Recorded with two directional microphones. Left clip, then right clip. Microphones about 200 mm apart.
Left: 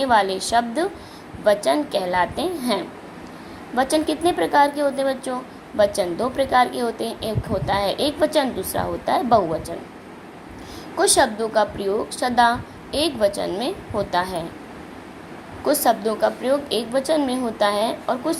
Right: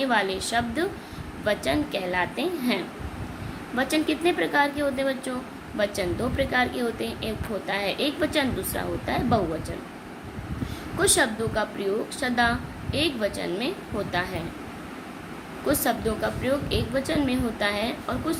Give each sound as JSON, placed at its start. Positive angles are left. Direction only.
{"t": 0.0, "sound": "a woman's voice", "side_deg": 15}
{"t": 10.9, "sound": "a woman's voice", "side_deg": 15}
{"t": 15.6, "sound": "a woman's voice", "side_deg": 15}